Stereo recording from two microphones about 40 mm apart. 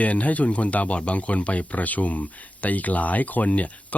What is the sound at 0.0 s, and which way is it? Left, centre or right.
Speech, left.